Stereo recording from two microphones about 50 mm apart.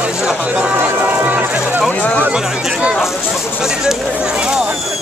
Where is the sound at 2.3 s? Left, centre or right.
Centre.